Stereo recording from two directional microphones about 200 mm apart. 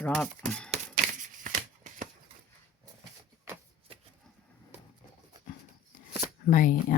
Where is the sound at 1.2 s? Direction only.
40° right (ahead or behind).